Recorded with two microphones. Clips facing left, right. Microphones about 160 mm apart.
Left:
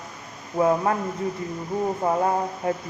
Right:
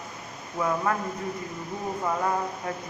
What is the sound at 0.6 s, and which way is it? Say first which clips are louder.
Speech: left 6 dB; 30° left (ahead or behind).